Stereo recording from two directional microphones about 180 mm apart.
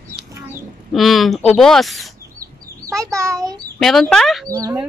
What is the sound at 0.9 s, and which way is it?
Speech, centre (ahead or behind).